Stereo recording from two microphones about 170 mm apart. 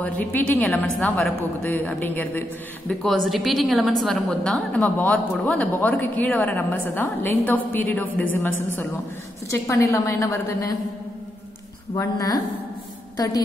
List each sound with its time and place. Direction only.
0.0 s a woman's voice: 10° left (ahead or behind)
11.9 s a woman's voice: 20° left (ahead or behind)